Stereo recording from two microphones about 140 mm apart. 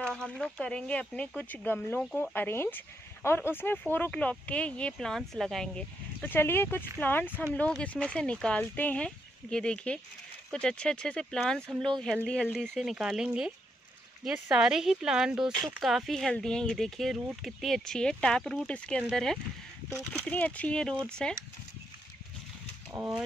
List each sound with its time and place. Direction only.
0.0 s speech: 5° left (ahead or behind)
12.5 s speech: centre (ahead or behind)
22.9 s speech: 20° right (ahead or behind)